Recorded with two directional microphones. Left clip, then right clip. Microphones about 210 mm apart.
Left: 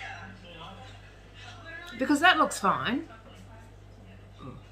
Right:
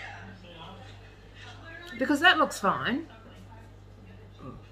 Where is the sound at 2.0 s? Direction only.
5° left (ahead or behind).